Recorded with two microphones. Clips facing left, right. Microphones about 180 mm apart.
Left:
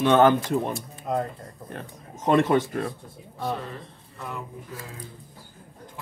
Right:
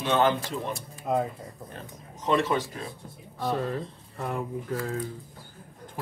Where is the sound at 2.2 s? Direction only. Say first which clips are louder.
Left 5 dB; 50° left (ahead or behind).